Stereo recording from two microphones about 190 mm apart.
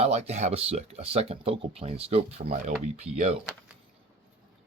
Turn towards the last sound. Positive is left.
turn(degrees=-35)  # may be behind; listen again after turning